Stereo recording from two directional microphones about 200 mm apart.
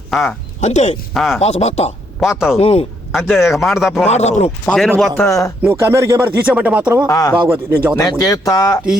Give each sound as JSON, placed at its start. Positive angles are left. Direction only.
{"t": 0.1, "sound": "speech", "side_deg": 0}
{"t": 0.6, "sound": "speech", "side_deg": 35}
{"t": 1.1, "sound": "speech", "side_deg": 0}
{"t": 1.4, "sound": "speech", "side_deg": 30}
{"t": 2.2, "sound": "speech", "side_deg": 0}
{"t": 2.6, "sound": "speech", "side_deg": 30}
{"t": 3.5, "sound": "speech", "side_deg": 0}
{"t": 4.1, "sound": "speech", "side_deg": 35}
{"t": 4.6, "sound": "a man's voice", "side_deg": 5}
{"t": 5.6, "sound": "speech", "side_deg": -15}
{"t": 7.1, "sound": "a man's voice", "side_deg": 15}
{"t": 7.4, "sound": "speech", "side_deg": -10}
{"t": 7.9, "sound": "a man's voice", "side_deg": 15}